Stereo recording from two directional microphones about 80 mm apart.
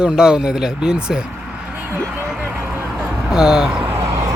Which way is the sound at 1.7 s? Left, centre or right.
Centre.